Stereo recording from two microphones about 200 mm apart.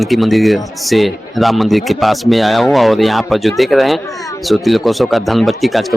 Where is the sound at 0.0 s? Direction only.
Centre (ahead or behind).